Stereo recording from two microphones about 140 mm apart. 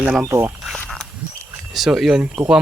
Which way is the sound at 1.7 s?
Centre (ahead or behind).